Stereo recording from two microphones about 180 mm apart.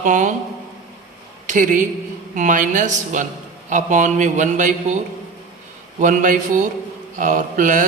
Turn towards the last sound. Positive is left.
turn(degrees=-45)  # may be behind; listen again after turning